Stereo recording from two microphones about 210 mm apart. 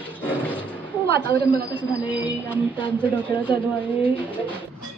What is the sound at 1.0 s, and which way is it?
Speech, 45° right (ahead or behind).